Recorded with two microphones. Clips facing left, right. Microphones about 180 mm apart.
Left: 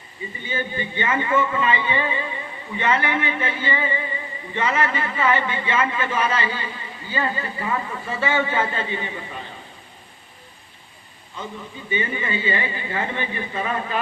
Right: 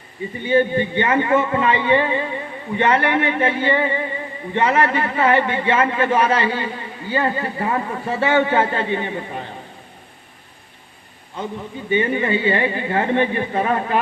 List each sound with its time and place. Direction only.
0.3 s speech: 60° right (ahead or behind)
11.9 s speech: 60° right (ahead or behind)